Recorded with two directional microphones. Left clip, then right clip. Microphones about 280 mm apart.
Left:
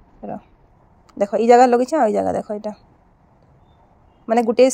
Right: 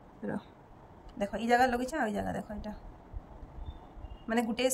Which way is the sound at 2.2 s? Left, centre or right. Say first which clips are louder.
Left 16 dB; left.